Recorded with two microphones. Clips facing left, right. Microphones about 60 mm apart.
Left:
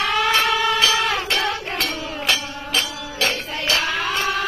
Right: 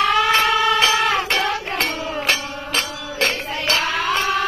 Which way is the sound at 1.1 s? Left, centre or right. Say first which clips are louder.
Right 2 dB; right.